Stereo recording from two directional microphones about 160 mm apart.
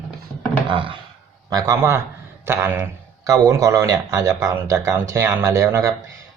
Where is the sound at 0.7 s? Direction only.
30° right (ahead or behind).